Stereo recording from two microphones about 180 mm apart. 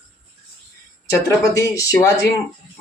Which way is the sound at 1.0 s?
20° left (ahead or behind).